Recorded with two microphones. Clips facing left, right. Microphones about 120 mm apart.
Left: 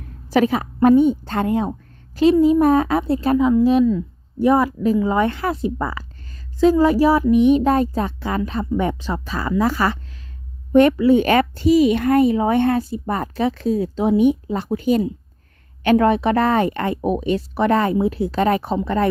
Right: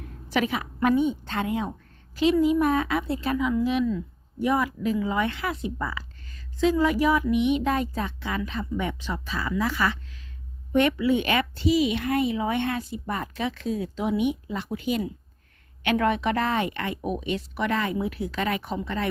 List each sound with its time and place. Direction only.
0.3 s a child's voice: 40° left (ahead or behind)